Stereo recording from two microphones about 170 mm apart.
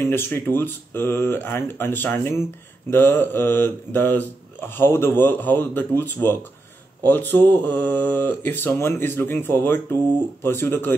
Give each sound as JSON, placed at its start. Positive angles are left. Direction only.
{"t": 0.0, "sound": "speech", "side_deg": 15}
{"t": 7.1, "sound": "speech", "side_deg": 10}